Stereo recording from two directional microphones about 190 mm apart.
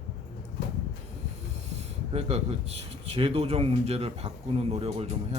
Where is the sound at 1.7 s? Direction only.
35° right (ahead or behind).